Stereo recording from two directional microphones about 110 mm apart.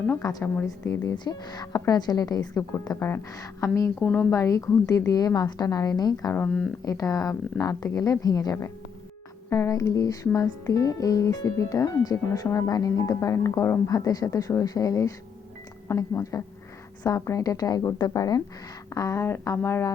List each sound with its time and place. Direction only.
0.2 s music: 30° left (ahead or behind)
3.3 s speech: 30° left (ahead or behind)
4.0 s speech: 10° left (ahead or behind)
4.3 s music: 30° left (ahead or behind)
15.9 s speech: 25° left (ahead or behind)
17.0 s music: 30° left (ahead or behind)
18.9 s speech: 30° left (ahead or behind)